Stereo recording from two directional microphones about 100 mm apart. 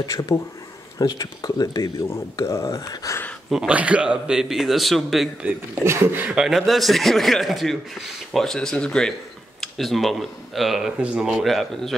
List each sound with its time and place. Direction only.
0.0 s speech: 35° left (ahead or behind)
2.0 s speech: 30° left (ahead or behind)
3.4 s speech: 5° right (ahead or behind)
5.9 s speech: 20° right (ahead or behind); by 11.9 s 5° left (ahead or behind)